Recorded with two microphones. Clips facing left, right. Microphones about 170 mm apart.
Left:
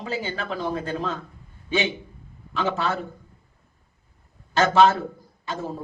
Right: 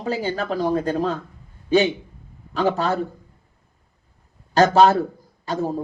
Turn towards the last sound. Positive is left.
turn(degrees=-35)  # may be behind; listen again after turning